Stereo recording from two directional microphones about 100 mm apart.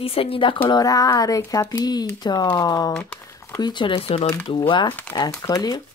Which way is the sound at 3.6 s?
50° left (ahead or behind).